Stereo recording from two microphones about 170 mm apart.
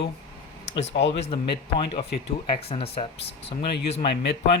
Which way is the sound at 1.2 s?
35° left (ahead or behind).